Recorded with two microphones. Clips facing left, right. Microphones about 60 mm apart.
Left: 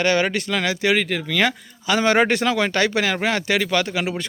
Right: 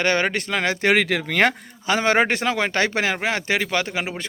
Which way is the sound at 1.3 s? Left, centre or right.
Right.